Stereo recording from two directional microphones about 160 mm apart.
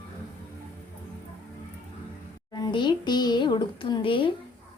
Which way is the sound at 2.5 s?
25° left (ahead or behind).